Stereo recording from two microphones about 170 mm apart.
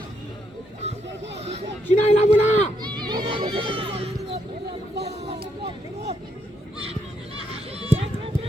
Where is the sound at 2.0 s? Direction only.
40° left (ahead or behind).